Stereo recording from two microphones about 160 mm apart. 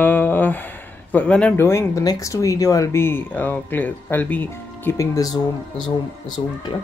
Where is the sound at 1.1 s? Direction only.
5° left (ahead or behind); by 5.9 s 25° left (ahead or behind).